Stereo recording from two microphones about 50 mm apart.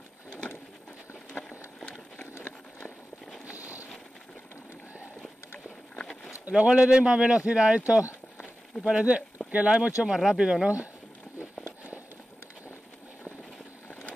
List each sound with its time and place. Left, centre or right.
1.8 s a sound: centre
6.5 s speech: centre
8.7 s speech: centre
9.5 s speech: right